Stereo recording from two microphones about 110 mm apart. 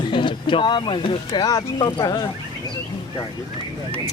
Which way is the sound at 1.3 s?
35° left (ahead or behind).